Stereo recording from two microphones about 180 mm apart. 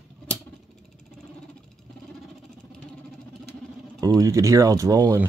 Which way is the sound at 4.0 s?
20° right (ahead or behind).